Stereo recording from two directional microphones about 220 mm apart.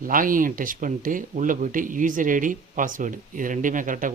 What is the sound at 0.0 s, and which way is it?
Speech, 40° right (ahead or behind).